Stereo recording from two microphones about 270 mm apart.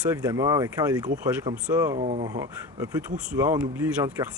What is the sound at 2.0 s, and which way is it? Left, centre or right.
Speech, right.